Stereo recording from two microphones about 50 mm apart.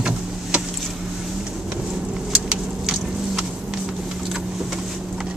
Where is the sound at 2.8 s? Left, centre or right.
Centre.